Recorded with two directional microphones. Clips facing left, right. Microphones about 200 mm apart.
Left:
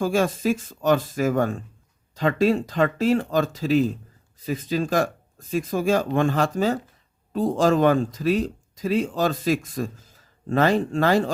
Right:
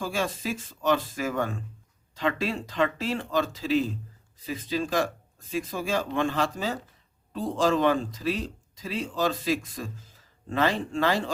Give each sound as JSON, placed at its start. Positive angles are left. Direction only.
{"t": 0.0, "sound": "speech", "side_deg": 45}